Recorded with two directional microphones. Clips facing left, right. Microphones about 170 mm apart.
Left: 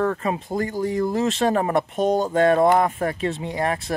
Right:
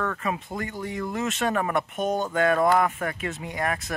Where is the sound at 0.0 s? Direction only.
35° left (ahead or behind).